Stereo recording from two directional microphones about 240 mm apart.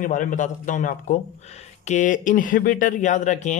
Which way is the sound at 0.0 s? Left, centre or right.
Left.